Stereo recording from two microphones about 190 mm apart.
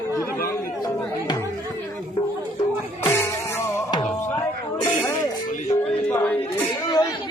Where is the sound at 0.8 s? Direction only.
20° left (ahead or behind).